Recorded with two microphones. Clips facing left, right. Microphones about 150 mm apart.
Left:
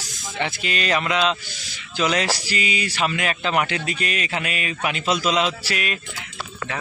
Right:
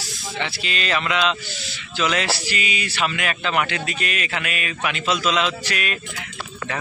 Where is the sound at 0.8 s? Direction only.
35° left (ahead or behind).